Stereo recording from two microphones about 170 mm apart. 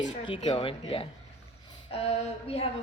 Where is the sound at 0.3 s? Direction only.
30° left (ahead or behind).